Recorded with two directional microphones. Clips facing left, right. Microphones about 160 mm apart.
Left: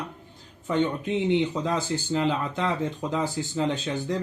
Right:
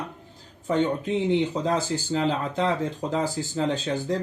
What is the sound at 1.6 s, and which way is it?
Speech, 40° right (ahead or behind).